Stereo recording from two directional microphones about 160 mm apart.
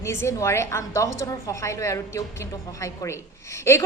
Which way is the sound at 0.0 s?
15° left (ahead or behind).